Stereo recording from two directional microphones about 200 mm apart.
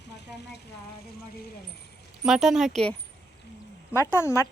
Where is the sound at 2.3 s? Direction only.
5° right (ahead or behind); by 4.5 s 15° left (ahead or behind).